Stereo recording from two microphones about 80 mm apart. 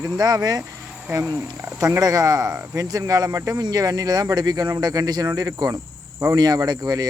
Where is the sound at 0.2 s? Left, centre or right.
Right.